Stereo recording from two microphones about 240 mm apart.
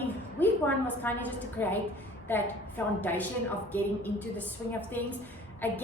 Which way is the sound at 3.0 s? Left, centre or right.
Centre.